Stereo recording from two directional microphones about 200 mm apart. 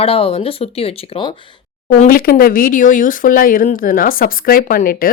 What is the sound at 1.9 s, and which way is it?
Speech, 45° left (ahead or behind).